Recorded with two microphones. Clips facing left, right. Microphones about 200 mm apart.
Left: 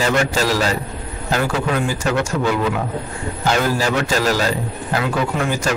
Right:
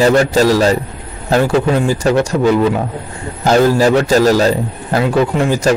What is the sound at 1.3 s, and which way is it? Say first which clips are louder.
Speech: right 7 dB; 30° right (ahead or behind).